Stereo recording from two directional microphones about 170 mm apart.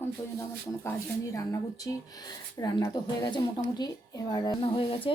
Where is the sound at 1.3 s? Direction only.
20° left (ahead or behind).